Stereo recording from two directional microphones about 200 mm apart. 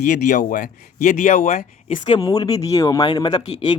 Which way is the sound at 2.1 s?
20° left (ahead or behind).